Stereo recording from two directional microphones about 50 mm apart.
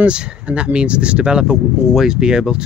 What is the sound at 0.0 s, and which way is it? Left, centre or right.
Speech, right.